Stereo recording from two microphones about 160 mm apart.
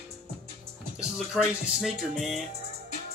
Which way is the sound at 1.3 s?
Centre (ahead or behind).